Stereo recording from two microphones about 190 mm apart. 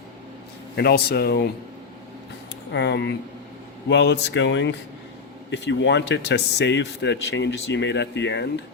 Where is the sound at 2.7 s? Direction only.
65° left (ahead or behind).